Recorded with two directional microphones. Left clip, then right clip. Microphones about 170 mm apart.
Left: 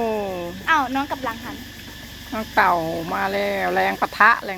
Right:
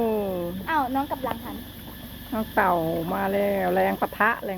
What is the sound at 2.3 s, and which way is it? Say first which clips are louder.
Speech: left 4 dB; 15° right (ahead or behind).